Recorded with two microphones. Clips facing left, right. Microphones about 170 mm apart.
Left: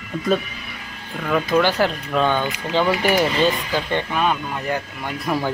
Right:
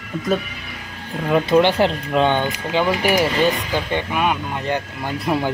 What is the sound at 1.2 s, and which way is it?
Speech, 25° right (ahead or behind).